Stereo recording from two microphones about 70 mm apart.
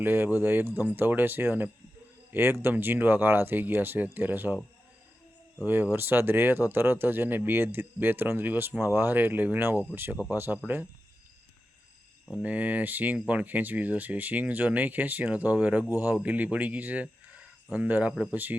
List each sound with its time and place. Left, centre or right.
0.0 s speech: right
5.6 s speech: right
12.4 s speech: centre